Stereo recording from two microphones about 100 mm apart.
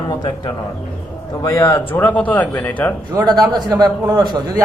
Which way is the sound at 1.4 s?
30° left (ahead or behind).